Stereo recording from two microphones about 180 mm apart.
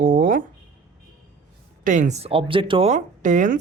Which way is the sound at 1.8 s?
45° right (ahead or behind).